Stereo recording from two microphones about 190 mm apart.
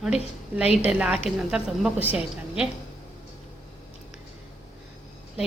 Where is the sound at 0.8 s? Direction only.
5° right (ahead or behind).